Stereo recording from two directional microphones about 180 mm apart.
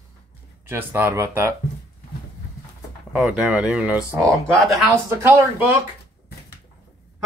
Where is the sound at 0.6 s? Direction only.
10° right (ahead or behind).